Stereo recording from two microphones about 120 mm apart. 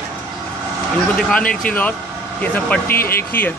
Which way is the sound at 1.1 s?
5° left (ahead or behind).